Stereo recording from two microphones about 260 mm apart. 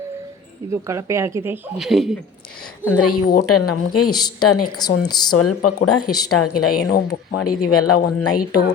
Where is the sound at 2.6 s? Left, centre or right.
Left.